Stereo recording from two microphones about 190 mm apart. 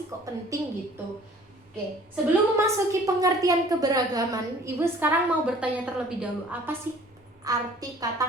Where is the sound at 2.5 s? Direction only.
15° right (ahead or behind).